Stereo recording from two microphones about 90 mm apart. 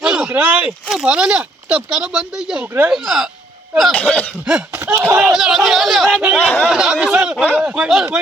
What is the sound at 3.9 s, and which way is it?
Speech, 15° left (ahead or behind).